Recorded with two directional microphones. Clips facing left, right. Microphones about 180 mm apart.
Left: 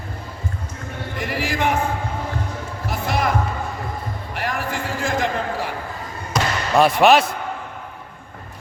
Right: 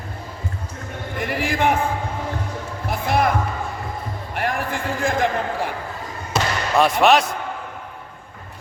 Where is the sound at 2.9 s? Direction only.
55° right (ahead or behind).